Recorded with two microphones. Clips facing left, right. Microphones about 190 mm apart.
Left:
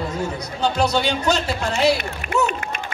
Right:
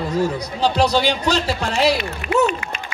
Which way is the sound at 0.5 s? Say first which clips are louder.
Right 2 dB; 30° right (ahead or behind).